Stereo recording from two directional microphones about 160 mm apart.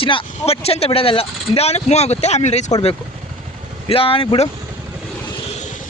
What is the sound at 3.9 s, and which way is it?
Speech, 35° left (ahead or behind).